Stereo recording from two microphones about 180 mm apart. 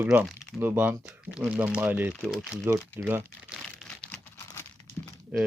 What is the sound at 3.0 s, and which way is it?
Speech, 10° right (ahead or behind).